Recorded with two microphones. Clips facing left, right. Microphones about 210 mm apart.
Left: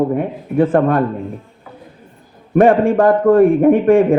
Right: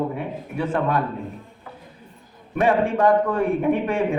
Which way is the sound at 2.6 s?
50° left (ahead or behind).